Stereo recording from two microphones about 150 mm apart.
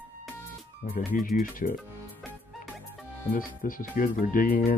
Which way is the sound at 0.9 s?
60° left (ahead or behind).